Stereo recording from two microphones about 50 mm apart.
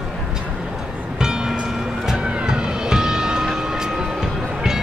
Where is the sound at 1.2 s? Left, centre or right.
Centre.